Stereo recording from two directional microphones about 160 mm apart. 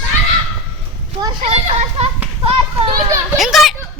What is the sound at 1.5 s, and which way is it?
A child's voice, 40° right (ahead or behind).